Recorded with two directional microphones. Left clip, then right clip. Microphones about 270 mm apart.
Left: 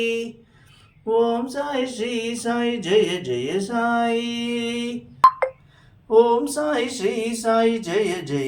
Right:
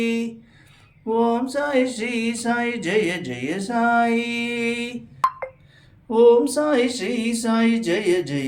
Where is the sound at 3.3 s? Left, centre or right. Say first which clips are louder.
Left 4 dB; centre.